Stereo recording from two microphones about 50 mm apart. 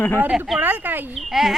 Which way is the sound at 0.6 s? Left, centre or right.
Right.